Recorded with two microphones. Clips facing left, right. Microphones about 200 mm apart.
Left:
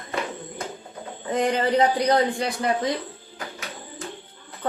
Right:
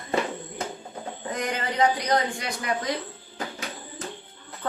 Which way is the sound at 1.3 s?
30° left (ahead or behind).